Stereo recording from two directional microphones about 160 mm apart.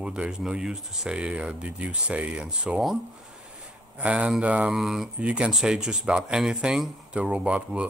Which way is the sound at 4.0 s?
5° right (ahead or behind).